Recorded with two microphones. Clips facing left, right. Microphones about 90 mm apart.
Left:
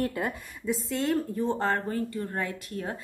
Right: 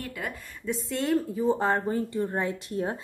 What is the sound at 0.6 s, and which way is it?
A woman's voice, centre (ahead or behind).